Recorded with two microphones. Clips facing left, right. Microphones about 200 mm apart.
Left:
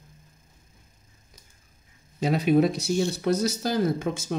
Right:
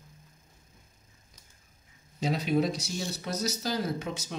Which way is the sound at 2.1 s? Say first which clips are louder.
Left 6 dB; 55° left (ahead or behind).